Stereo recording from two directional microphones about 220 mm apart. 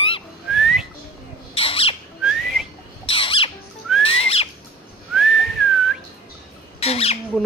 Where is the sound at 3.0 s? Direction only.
25° left (ahead or behind).